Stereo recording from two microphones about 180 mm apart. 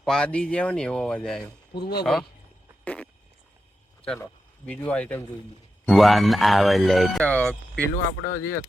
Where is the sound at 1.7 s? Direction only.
65° left (ahead or behind).